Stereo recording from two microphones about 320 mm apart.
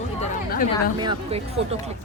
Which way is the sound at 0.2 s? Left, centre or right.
Left.